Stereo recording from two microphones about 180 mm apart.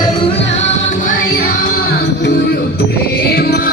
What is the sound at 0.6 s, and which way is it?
Music, 45° left (ahead or behind).